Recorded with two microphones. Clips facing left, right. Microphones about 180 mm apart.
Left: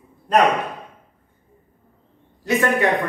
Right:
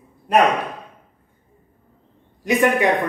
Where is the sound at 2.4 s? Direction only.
15° right (ahead or behind).